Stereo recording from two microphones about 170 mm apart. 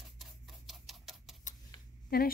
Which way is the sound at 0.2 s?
Centre (ahead or behind).